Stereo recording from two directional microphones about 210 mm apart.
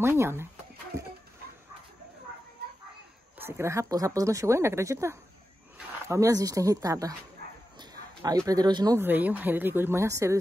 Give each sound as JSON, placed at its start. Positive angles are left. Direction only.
{"t": 0.0, "sound": "speech", "side_deg": -10}
{"t": 3.3, "sound": "speech", "side_deg": -10}
{"t": 7.8, "sound": "a sound", "side_deg": -20}
{"t": 8.5, "sound": "speech", "side_deg": -20}